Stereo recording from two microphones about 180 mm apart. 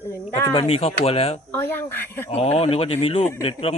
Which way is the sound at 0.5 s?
35° left (ahead or behind).